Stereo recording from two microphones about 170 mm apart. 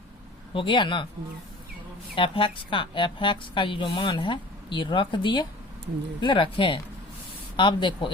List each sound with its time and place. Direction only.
0.5 s a woman's voice: 30° left (ahead or behind)
2.1 s a woman's voice: 30° left (ahead or behind)